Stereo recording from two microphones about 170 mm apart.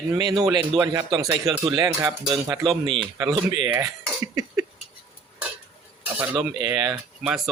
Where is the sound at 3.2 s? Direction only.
25° right (ahead or behind).